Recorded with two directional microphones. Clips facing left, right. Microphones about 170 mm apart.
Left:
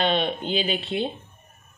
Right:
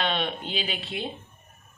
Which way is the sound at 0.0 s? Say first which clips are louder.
Left 5 dB; 25° left (ahead or behind).